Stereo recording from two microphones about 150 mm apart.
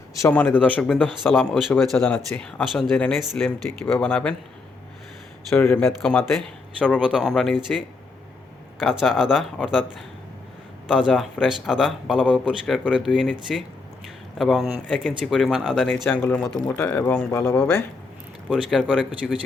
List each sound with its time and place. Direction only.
0.1 s a man's voice: 15° left (ahead or behind)
5.5 s a man's voice: 15° left (ahead or behind)
5.8 s a man's voice: 5° left (ahead or behind)
10.8 s a man's voice: centre (ahead or behind)
14.3 s a man's voice: centre (ahead or behind)
18.5 s a man's voice: 5° right (ahead or behind)